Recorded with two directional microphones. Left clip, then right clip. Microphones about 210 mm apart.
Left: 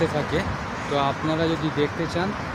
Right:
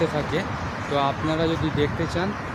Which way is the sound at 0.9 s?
Centre (ahead or behind).